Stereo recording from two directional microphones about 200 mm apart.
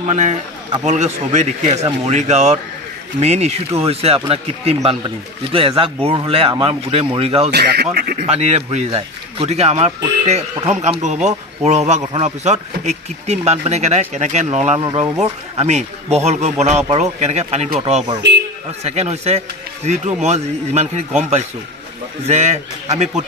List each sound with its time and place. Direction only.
0.0 s a man's voice: 35° right (ahead or behind)
7.5 s speech: 55° right (ahead or behind)
8.3 s speech: 35° right (ahead or behind)